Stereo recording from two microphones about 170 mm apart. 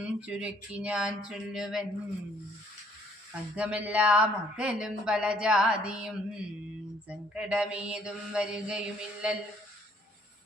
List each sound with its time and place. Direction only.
0.0 s speech: 5° right (ahead or behind)
3.5 s speech: 5° right (ahead or behind)
7.1 s mantra: 5° right (ahead or behind)